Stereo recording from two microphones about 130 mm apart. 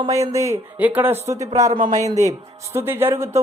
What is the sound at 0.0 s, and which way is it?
Speech, 25° right (ahead or behind).